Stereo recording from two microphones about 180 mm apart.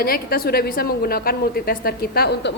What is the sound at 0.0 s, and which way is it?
A woman's voice, 55° left (ahead or behind).